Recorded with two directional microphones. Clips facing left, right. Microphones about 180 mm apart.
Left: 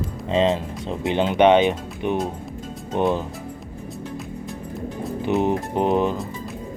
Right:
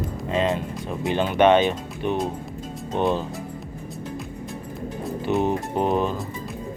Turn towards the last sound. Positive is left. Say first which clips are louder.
# left 2 dB
turn(degrees=15)  # may be behind; listen again after turning